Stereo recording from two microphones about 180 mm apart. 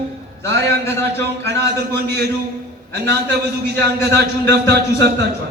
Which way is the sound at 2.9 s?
65° right (ahead or behind).